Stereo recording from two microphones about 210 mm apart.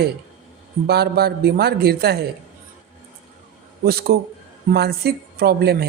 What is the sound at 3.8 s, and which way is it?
A man's voice, 45° right (ahead or behind).